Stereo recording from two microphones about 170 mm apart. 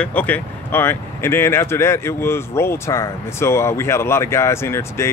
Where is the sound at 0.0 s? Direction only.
10° left (ahead or behind).